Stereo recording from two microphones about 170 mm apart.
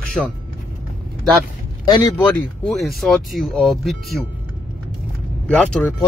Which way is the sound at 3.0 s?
Centre (ahead or behind).